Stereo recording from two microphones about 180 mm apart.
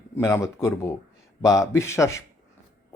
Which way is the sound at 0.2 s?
15° left (ahead or behind).